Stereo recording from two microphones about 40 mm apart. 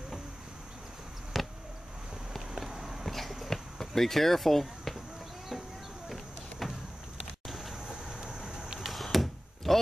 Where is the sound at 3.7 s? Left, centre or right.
Centre.